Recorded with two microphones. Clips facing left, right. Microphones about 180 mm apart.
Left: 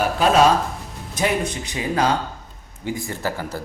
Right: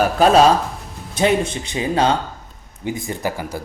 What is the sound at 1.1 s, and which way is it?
Speech, 25° right (ahead or behind).